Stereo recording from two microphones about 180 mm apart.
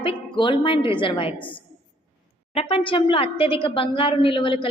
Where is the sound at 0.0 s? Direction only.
25° left (ahead or behind).